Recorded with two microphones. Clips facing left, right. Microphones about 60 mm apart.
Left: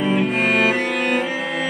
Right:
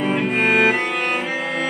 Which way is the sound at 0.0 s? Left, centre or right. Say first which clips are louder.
Even; centre.